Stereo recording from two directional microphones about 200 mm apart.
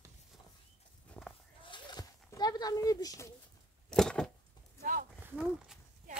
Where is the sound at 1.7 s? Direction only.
20° left (ahead or behind).